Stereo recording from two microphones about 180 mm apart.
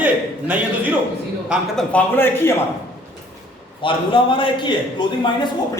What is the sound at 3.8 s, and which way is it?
A man's voice, 30° left (ahead or behind).